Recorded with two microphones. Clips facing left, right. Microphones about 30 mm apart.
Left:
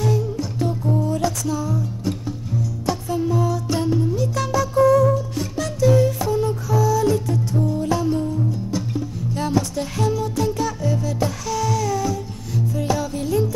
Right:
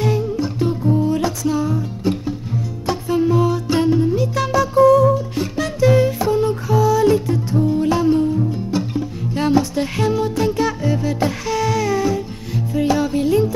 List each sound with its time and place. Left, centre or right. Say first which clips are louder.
0.0 s music: right 3 dB; right